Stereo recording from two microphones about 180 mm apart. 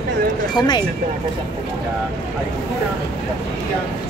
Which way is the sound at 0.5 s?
25° left (ahead or behind).